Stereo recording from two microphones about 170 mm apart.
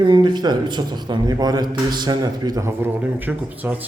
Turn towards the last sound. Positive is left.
turn(degrees=-10)  # may be behind; listen again after turning